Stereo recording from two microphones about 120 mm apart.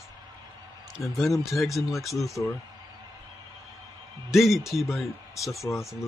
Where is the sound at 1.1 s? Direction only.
Centre (ahead or behind).